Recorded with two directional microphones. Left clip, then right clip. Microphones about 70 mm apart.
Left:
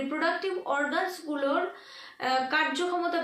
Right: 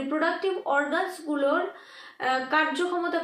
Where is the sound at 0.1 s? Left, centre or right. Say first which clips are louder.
Right 4 dB; left.